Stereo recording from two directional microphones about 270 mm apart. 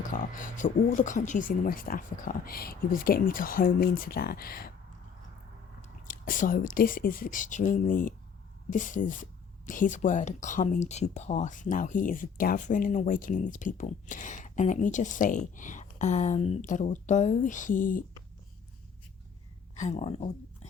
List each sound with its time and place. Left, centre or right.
0.1 s speech: left
5.8 s speech: left
19.7 s speech: left